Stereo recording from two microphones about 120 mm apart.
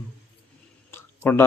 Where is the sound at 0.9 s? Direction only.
20° left (ahead or behind).